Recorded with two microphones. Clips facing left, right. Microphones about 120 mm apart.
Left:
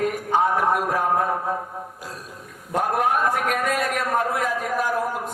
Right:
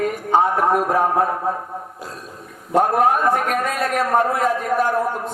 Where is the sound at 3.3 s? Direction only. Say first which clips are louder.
Right 3 dB; 40° right (ahead or behind).